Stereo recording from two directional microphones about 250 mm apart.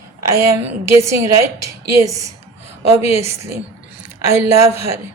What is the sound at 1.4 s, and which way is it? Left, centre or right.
Speech, right.